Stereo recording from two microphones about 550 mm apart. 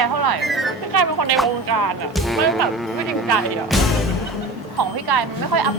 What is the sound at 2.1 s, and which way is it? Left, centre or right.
Speech, centre.